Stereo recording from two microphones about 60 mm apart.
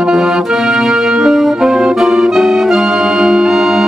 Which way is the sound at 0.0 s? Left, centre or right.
Centre.